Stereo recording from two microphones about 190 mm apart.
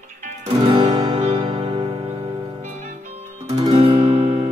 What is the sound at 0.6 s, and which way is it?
Music, 20° right (ahead or behind).